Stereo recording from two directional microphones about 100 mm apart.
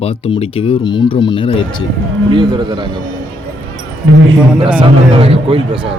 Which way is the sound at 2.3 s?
45° right (ahead or behind).